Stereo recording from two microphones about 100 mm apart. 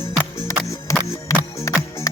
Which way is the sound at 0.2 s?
25° left (ahead or behind).